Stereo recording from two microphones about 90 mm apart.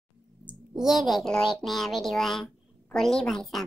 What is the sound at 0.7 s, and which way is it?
A child's voice, 5° right (ahead or behind).